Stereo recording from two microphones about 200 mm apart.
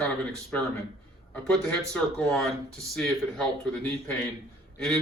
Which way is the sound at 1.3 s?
5° left (ahead or behind).